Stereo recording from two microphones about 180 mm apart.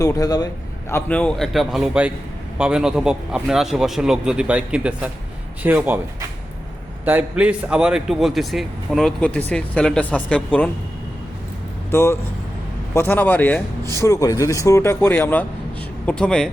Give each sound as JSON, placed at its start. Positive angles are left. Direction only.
{"t": 0.0, "sound": "a man's voice", "side_deg": 20}
{"t": 11.9, "sound": "a man's voice", "side_deg": 15}